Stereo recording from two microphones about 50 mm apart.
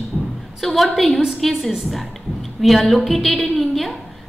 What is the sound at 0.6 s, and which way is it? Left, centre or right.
A woman's voice, centre.